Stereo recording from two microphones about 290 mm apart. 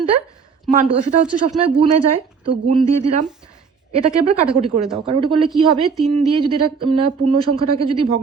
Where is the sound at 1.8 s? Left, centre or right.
Centre.